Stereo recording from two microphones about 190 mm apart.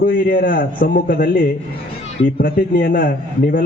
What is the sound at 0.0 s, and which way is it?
A man's voice, 50° left (ahead or behind).